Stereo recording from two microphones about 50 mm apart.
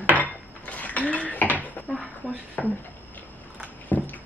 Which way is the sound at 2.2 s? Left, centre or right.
Left.